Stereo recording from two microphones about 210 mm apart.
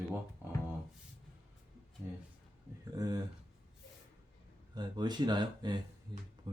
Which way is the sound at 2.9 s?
15° right (ahead or behind).